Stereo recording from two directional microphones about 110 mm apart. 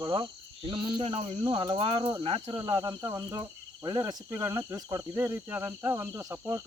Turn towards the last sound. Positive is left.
turn(degrees=-30)  # may be behind; listen again after turning